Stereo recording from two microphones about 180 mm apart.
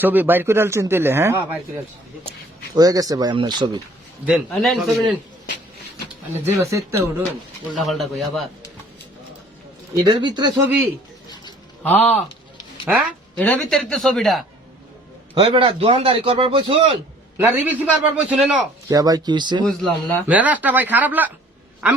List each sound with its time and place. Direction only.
0.0 s a man's voice: 10° right (ahead or behind)
2.7 s speech: 20° right (ahead or behind)
4.3 s a man's voice: centre (ahead or behind)
6.4 s a man's voice: 15° right (ahead or behind)
7.8 s a man's voice: centre (ahead or behind)
10.2 s speech: 25° right (ahead or behind)
11.8 s speech: 10° left (ahead or behind)
12.8 s speech: 5° right (ahead or behind)
13.3 s a man's voice: 5° left (ahead or behind)
15.4 s a man's voice: 30° right (ahead or behind)
17.3 s a man's voice: 10° right (ahead or behind)
18.9 s speech: 20° right (ahead or behind)
19.6 s a man's voice: 5° left (ahead or behind)
20.2 s a man's voice: 10° right (ahead or behind)